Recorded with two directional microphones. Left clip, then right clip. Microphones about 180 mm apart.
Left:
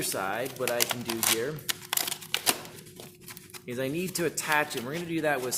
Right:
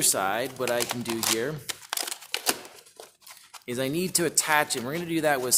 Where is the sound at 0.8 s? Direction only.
20° right (ahead or behind).